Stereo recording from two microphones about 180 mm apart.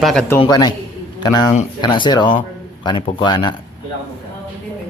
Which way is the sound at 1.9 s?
25° left (ahead or behind).